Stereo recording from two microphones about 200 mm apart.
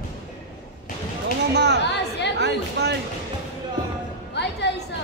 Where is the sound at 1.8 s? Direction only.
60° left (ahead or behind).